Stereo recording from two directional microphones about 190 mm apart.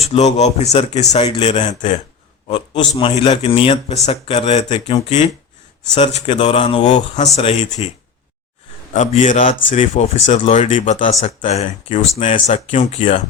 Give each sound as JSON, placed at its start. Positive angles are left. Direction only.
{"t": 0.0, "sound": "speech", "side_deg": 35}
{"t": 2.5, "sound": "a man's voice", "side_deg": 25}